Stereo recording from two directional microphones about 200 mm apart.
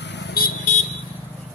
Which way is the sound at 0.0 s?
60° left (ahead or behind).